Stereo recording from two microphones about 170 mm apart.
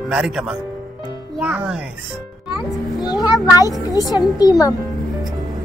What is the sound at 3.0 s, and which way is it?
Speech, 25° left (ahead or behind).